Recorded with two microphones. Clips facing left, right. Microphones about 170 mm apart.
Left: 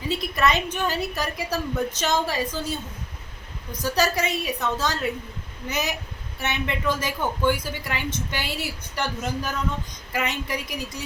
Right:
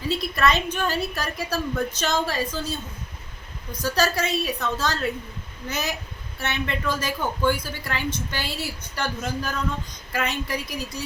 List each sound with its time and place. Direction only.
0.2 s a woman's voice: 15° left (ahead or behind)